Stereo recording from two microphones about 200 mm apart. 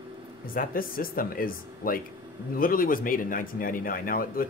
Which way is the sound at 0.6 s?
45° left (ahead or behind).